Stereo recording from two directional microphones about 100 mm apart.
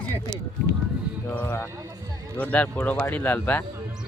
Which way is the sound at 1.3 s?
15° left (ahead or behind).